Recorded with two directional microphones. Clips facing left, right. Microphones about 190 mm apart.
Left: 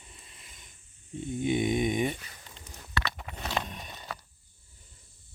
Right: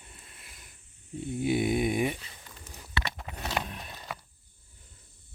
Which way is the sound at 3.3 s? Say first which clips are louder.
Right 1 dB; centre (ahead or behind).